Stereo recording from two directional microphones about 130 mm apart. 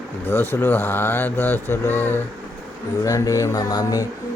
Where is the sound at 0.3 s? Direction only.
15° left (ahead or behind).